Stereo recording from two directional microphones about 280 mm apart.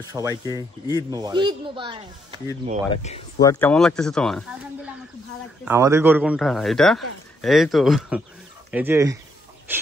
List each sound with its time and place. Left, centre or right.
0.0 s speech: centre
0.6 s speech: centre
1.1 s speech: centre
2.9 s speech: left
3.3 s speech: centre
9.7 s a sound: centre